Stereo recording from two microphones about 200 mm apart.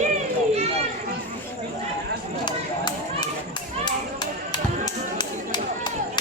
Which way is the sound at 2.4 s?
20° left (ahead or behind).